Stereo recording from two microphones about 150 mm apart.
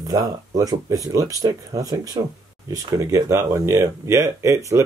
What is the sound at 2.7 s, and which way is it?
Speech, 20° right (ahead or behind).